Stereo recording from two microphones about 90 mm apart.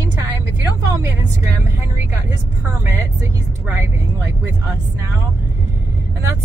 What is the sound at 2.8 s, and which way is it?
Speech, 30° right (ahead or behind).